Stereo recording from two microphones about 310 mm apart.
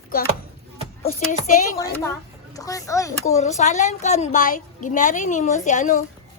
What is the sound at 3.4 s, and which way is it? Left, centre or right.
A woman's voice, left.